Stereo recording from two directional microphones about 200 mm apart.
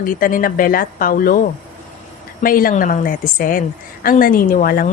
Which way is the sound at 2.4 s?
45° left (ahead or behind).